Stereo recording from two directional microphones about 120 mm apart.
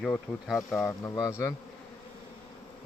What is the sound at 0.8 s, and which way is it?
Speech, 25° left (ahead or behind).